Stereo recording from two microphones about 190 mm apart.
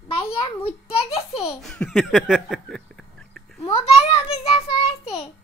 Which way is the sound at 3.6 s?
25° left (ahead or behind).